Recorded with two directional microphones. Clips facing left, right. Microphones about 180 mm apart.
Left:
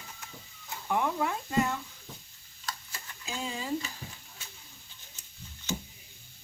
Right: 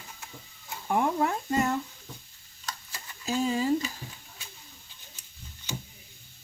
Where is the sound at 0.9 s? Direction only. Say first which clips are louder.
Right 4 dB; 45° right (ahead or behind).